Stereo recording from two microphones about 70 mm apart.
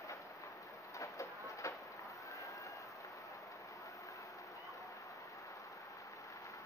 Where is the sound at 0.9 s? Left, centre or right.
Left.